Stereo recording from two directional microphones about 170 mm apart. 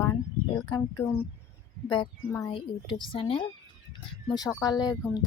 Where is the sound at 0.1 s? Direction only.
25° left (ahead or behind).